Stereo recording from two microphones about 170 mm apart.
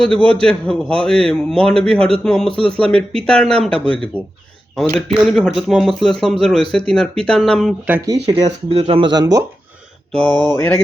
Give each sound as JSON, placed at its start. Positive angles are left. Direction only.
{"t": 0.0, "sound": "a man's voice", "side_deg": 5}
{"t": 7.9, "sound": "speech", "side_deg": -10}
{"t": 8.4, "sound": "speech", "side_deg": -35}
{"t": 10.1, "sound": "mantra", "side_deg": 5}